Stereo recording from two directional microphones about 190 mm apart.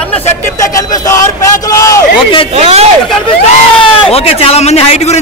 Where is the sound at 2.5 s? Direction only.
35° right (ahead or behind).